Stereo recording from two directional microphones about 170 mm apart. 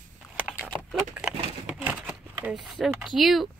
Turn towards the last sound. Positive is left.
turn(degrees=0)  # may be behind; listen again after turning